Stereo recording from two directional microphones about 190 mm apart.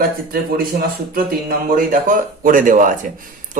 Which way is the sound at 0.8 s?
50° right (ahead or behind).